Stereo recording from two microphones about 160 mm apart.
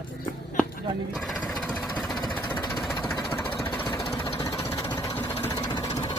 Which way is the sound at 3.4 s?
15° left (ahead or behind).